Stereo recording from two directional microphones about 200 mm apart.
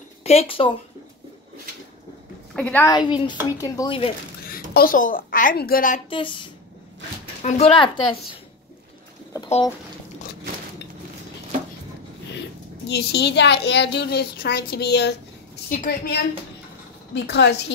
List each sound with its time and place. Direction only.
0.2 s speech: 30° left (ahead or behind)
2.5 s a woman's voice: 5° left (ahead or behind)
2.9 s speech: 25° left (ahead or behind)
4.5 s a child's voice: 45° left (ahead or behind)
6.0 s speech: 25° left (ahead or behind)
12.3 s a child's voice: 60° left (ahead or behind)
15.7 s a woman's voice: 45° left (ahead or behind)
17.1 s a woman's voice: 60° left (ahead or behind)